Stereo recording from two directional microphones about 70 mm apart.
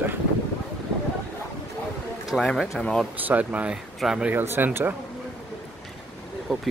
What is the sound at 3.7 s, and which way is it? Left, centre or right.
Speech, centre.